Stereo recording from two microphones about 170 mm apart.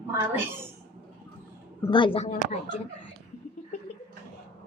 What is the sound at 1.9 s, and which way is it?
Speech, 30° left (ahead or behind).